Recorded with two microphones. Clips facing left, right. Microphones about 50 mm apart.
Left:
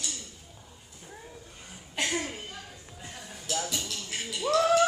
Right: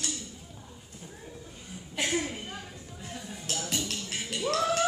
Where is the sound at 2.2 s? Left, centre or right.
Right.